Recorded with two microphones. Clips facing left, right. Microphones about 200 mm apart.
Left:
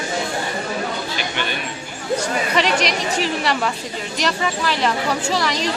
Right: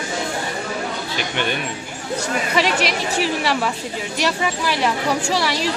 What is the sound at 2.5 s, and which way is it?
A woman's voice, 5° right (ahead or behind).